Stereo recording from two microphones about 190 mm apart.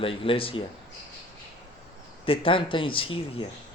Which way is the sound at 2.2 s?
30° left (ahead or behind).